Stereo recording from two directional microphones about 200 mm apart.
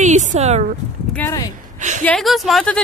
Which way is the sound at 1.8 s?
35° right (ahead or behind).